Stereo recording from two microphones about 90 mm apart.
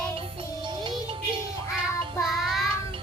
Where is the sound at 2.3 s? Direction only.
Centre (ahead or behind).